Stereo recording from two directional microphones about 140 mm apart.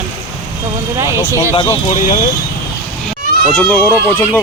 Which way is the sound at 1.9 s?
60° left (ahead or behind).